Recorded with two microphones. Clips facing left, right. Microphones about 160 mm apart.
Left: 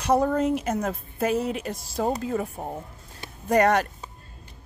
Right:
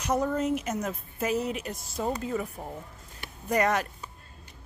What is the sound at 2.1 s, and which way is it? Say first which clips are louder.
Speech: left 3 dB; 50° left (ahead or behind).